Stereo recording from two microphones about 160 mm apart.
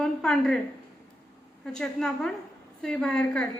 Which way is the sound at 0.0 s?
5° left (ahead or behind).